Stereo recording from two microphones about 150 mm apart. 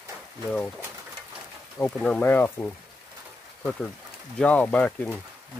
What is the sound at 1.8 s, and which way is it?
Speech, 10° left (ahead or behind).